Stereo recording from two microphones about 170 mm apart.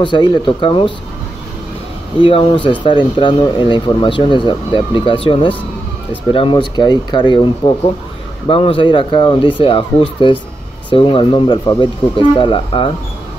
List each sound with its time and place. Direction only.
0.0 s speech: 25° left (ahead or behind)
2.1 s speech: 30° left (ahead or behind)